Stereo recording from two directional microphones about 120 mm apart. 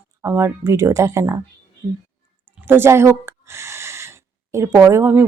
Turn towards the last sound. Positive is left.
turn(degrees=-20)  # may be behind; listen again after turning